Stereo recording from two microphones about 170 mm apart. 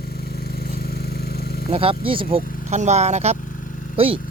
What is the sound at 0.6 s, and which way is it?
Vehicle, 65° left (ahead or behind).